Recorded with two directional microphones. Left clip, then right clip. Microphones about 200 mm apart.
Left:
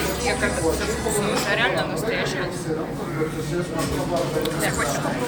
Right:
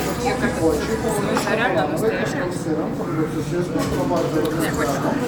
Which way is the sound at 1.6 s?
40° right (ahead or behind).